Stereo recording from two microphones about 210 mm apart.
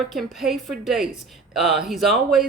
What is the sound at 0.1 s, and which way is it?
Speech, centre (ahead or behind).